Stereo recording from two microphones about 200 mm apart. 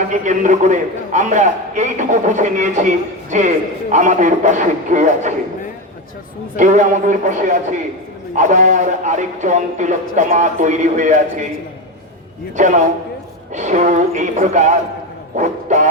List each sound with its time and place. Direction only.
0.1 s a man's voice: 35° right (ahead or behind)
6.6 s a man's voice: 40° right (ahead or behind)
12.5 s a man's voice: 35° right (ahead or behind)